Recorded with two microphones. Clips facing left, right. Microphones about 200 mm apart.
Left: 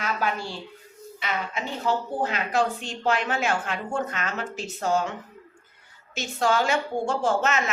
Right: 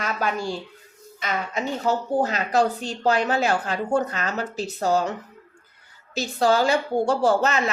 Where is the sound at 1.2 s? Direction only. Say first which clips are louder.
Right 3 dB; 40° right (ahead or behind).